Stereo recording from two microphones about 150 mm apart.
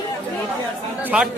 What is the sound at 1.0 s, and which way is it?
Speech, 10° right (ahead or behind).